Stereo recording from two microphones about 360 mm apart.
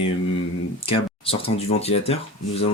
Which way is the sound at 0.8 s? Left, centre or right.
Centre.